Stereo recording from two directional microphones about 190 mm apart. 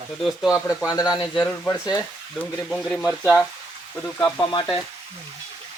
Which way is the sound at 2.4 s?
Centre (ahead or behind).